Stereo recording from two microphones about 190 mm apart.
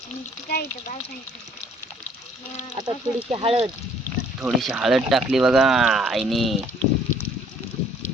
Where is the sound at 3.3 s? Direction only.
30° right (ahead or behind).